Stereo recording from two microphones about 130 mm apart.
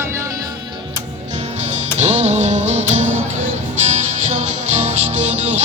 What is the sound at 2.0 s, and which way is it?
Music, 60° right (ahead or behind).